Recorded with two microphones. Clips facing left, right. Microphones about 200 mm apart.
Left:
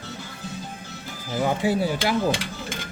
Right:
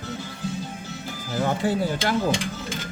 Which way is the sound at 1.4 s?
10° left (ahead or behind).